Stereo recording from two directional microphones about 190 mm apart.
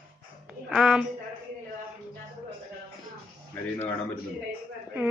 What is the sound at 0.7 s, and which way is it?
Speech, 5° right (ahead or behind).